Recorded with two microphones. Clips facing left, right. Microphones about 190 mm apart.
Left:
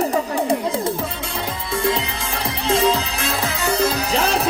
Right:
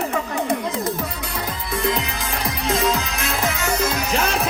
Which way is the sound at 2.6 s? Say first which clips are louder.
Left 3 dB; 30° left (ahead or behind).